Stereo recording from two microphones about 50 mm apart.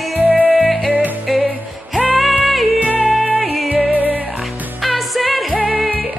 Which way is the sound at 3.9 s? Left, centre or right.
Right.